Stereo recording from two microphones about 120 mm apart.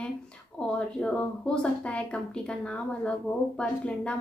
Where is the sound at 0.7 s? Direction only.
5° left (ahead or behind).